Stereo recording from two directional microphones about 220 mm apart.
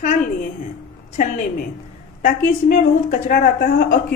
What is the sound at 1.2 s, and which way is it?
Speech, 35° left (ahead or behind).